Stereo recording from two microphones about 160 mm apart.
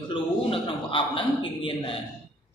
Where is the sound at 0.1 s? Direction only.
30° left (ahead or behind).